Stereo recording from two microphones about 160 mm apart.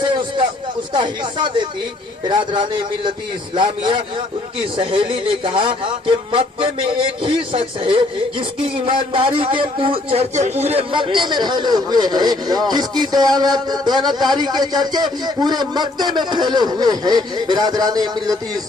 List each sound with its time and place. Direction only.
0.9 s a man's voice: 30° right (ahead or behind)